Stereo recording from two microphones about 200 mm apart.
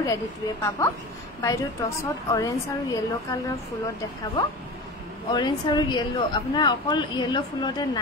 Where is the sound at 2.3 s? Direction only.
15° left (ahead or behind).